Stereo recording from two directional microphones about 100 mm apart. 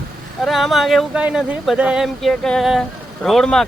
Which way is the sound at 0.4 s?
Centre (ahead or behind).